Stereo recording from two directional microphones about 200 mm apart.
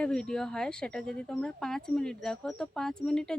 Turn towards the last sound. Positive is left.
turn(degrees=5)  # may be behind; listen again after turning